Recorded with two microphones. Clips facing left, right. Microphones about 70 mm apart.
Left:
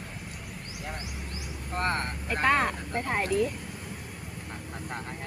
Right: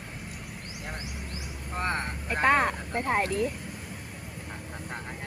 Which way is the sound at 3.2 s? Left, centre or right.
Right.